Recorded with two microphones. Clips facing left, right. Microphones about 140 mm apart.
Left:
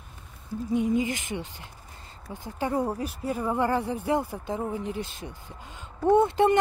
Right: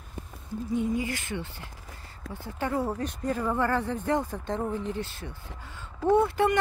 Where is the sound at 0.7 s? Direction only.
20° left (ahead or behind).